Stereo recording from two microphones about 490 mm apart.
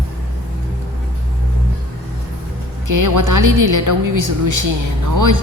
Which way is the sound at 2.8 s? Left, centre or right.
Right.